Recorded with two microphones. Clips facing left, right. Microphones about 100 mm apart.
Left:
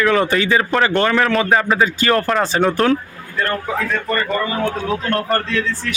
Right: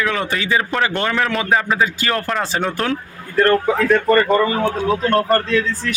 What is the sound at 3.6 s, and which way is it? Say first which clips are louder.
Speech: right 6 dB; 40° right (ahead or behind).